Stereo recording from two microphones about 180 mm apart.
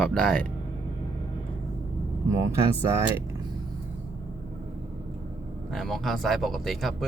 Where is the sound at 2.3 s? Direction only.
15° right (ahead or behind).